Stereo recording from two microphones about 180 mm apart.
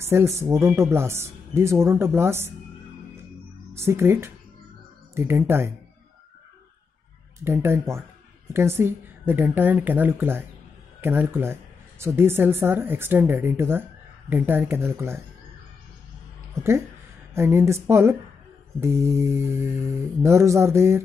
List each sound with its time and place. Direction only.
0.0 s speech: 15° right (ahead or behind)
3.7 s speech: 15° right (ahead or behind)
7.4 s speech: 15° right (ahead or behind)
16.6 s speech: 15° right (ahead or behind)